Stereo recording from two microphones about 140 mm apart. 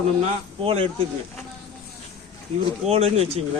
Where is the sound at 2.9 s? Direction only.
50° right (ahead or behind).